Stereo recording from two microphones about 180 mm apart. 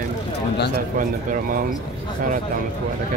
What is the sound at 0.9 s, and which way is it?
Speech, 50° right (ahead or behind).